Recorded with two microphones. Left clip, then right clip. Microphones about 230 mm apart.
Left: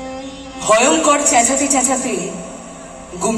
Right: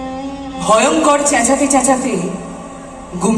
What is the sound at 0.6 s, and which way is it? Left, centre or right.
A man's voice, right.